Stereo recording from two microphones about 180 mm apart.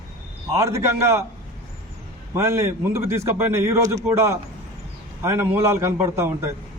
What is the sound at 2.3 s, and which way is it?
Speech, 15° right (ahead or behind).